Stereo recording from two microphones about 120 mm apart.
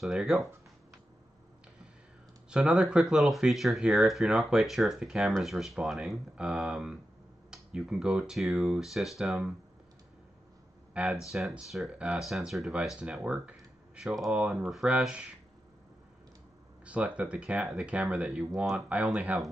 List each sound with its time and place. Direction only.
0.0 s speech: centre (ahead or behind)
2.5 s speech: 10° right (ahead or behind)
10.9 s a sound: 10° right (ahead or behind)
11.2 s speech: centre (ahead or behind)
16.8 s speech: 10° right (ahead or behind)